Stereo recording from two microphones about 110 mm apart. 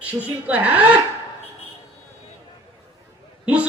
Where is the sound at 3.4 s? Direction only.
10° right (ahead or behind).